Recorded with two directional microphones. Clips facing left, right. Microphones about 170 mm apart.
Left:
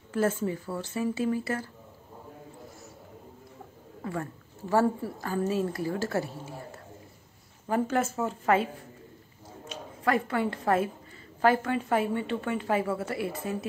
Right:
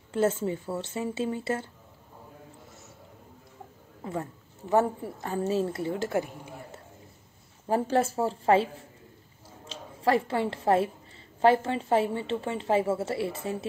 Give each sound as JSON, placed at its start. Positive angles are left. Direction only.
{"t": 0.1, "sound": "a woman's voice", "side_deg": -25}
{"t": 4.0, "sound": "a woman's voice", "side_deg": -20}
{"t": 7.6, "sound": "a woman's voice", "side_deg": -30}